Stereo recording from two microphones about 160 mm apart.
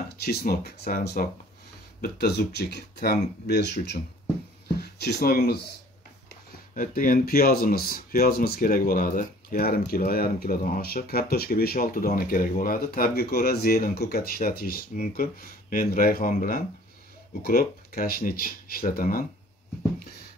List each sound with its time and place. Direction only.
0.2 s speech: 75° left (ahead or behind)
2.0 s speech: 85° left
5.0 s speech: 70° left (ahead or behind)
6.7 s speech: 55° left (ahead or behind)